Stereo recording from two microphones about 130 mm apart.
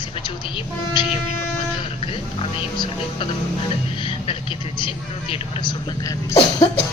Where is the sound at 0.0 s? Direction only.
35° left (ahead or behind).